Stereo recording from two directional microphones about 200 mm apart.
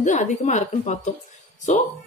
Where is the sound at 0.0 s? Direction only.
40° left (ahead or behind).